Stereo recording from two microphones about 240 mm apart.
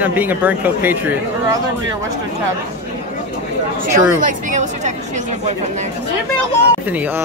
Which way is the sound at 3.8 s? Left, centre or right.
Right.